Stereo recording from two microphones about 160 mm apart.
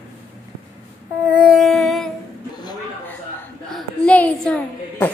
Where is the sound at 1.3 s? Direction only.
5° right (ahead or behind).